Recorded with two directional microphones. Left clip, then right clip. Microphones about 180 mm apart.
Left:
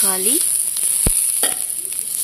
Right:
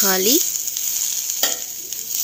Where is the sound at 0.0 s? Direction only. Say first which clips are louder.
Right 5 dB; 15° right (ahead or behind).